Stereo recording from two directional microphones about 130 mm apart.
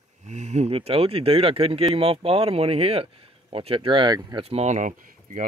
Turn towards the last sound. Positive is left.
turn(degrees=-85)